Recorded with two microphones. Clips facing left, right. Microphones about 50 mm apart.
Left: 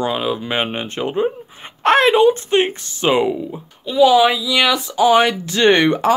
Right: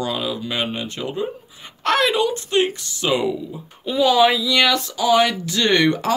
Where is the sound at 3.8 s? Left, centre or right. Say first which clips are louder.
Left 3 dB; centre.